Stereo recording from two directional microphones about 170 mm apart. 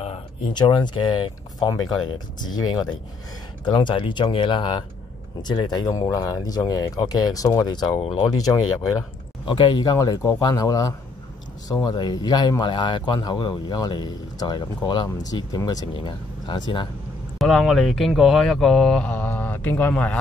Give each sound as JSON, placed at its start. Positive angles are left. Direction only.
{"t": 0.0, "sound": "speech", "side_deg": 30}
{"t": 9.5, "sound": "speech", "side_deg": 30}
{"t": 17.4, "sound": "speech", "side_deg": 0}